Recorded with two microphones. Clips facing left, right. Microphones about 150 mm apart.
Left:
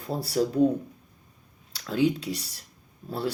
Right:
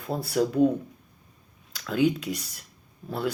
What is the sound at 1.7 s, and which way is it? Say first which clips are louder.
Speech: right 1 dB; 35° left (ahead or behind).